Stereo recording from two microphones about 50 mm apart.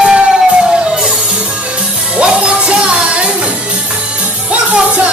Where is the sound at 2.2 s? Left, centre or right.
Right.